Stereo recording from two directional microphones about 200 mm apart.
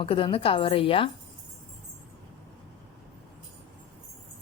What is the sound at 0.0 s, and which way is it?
A woman's voice, 25° left (ahead or behind).